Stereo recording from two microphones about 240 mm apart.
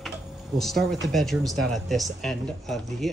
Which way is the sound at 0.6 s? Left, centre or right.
Centre.